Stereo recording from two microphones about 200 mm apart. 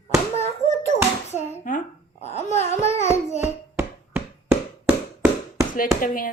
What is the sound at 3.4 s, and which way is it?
Hands, 10° right (ahead or behind).